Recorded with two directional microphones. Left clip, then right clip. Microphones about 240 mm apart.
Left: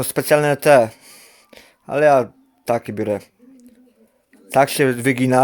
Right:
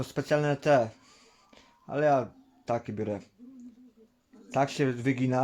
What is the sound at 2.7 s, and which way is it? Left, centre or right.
Speech, left.